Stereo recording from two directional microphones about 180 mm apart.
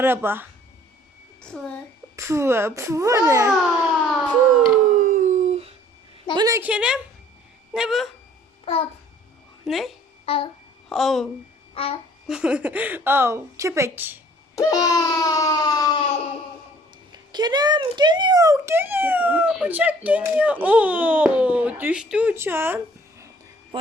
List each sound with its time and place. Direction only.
0.0 s a child's voice: 10° right (ahead or behind)
1.4 s a woman's voice: 5° left (ahead or behind)
2.1 s a child's voice: 15° right (ahead or behind)
4.8 s howl: 45° right (ahead or behind)
6.3 s a woman's voice: 20° right (ahead or behind)
6.6 s a woman's voice: 5° right (ahead or behind)
8.7 s a child's voice: 35° left (ahead or behind)
9.6 s a woman's voice: centre (ahead or behind)
10.2 s a child's voice: 30° left (ahead or behind)
10.8 s speech: centre (ahead or behind)
11.7 s a child's voice: 30° left (ahead or behind)
12.3 s a child's voice: 5° right (ahead or behind)
14.5 s baby cry: 20° left (ahead or behind)
17.1 s a child's voice: 25° right (ahead or behind)